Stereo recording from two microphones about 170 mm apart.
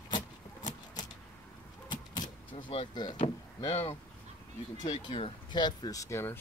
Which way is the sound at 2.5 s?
30° left (ahead or behind).